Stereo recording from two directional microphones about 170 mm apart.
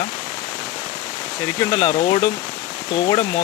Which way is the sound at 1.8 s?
40° left (ahead or behind).